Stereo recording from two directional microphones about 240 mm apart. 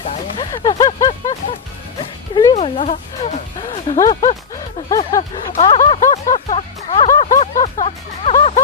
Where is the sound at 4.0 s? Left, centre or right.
Centre.